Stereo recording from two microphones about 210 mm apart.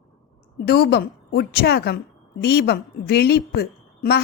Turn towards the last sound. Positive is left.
turn(degrees=50)  # may be behind; listen again after turning